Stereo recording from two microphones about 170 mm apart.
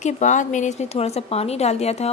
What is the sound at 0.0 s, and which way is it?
A woman's voice, 45° left (ahead or behind).